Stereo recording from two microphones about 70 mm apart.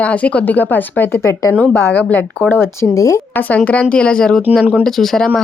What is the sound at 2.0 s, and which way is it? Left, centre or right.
Speech, left.